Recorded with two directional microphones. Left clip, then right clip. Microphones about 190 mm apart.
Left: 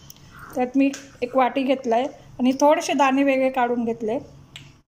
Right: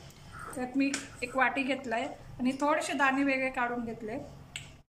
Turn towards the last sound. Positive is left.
turn(degrees=40)  # may be behind; listen again after turning